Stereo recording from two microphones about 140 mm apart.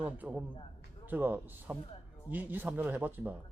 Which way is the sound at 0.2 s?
10° right (ahead or behind).